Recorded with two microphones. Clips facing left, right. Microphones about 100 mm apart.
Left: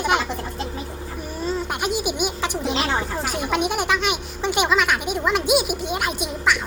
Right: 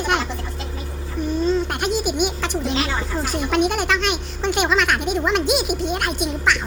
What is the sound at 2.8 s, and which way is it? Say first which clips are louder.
Speech: left 1 dB; 50° left (ahead or behind).